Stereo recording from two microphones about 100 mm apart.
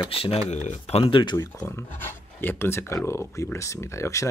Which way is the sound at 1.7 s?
25° left (ahead or behind).